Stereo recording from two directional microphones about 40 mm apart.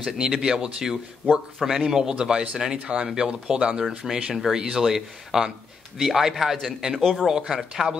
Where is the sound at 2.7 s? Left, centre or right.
Right.